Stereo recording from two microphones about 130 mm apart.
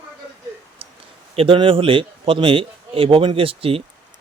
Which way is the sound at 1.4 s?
45° right (ahead or behind).